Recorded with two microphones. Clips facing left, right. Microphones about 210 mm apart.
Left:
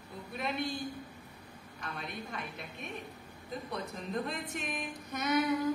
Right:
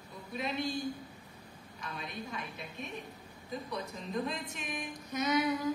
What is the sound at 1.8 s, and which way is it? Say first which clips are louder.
Speech: even; 55° left (ahead or behind).